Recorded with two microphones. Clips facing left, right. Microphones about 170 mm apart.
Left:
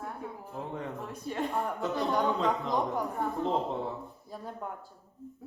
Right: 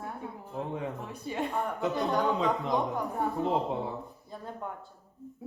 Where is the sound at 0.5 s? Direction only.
Centre (ahead or behind).